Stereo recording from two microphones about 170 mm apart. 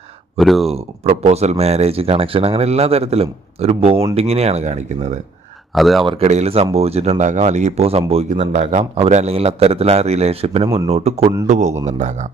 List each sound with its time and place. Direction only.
0.3 s speech: centre (ahead or behind)
0.7 s speech: 40° right (ahead or behind)
5.7 s speech: centre (ahead or behind)
6.1 s speech: 40° right (ahead or behind)